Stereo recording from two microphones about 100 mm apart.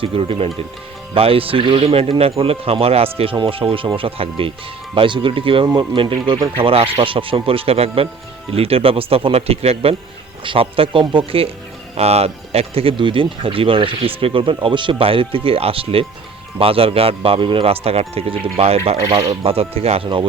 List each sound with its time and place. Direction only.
0.0 s speech: 70° right (ahead or behind)
3.3 s speech: 65° right (ahead or behind)
6.6 s speech: 65° right (ahead or behind); by 9.9 s 90° right
10.4 s speech: 65° right (ahead or behind)
11.0 s speech: 55° right (ahead or behind); by 11.5 s 70° right (ahead or behind)
11.9 s speech: 90° right
13.0 s speech: 60° right (ahead or behind); by 20.1 s 90° right